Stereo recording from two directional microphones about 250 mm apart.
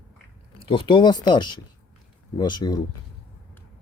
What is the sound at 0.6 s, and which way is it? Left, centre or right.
Speech, left.